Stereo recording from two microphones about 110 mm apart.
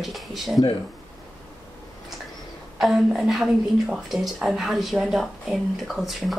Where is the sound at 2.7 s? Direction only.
Centre (ahead or behind).